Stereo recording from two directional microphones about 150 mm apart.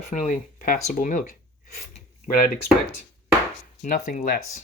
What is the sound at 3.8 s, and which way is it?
Speech, 60° left (ahead or behind).